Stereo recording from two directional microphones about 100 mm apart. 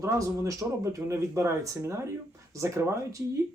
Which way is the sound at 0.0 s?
30° right (ahead or behind).